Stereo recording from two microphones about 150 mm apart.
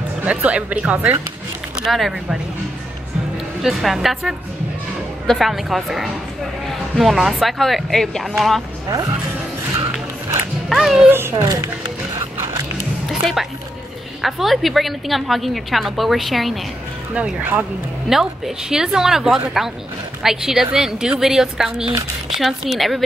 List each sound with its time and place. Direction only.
0.2 s a woman's voice: 10° right (ahead or behind)
3.6 s a woman's voice: centre (ahead or behind)
10.7 s a woman's voice: centre (ahead or behind)
11.1 s a child's voice: 15° right (ahead or behind)
12.2 s music: 20° right (ahead or behind)
13.1 s a woman's voice: centre (ahead or behind)